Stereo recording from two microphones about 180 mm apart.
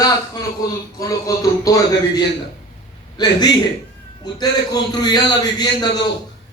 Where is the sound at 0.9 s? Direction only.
20° left (ahead or behind).